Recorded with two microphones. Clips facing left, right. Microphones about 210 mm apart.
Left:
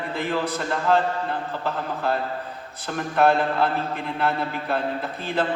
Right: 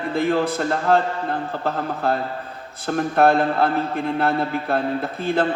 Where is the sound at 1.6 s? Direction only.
45° right (ahead or behind).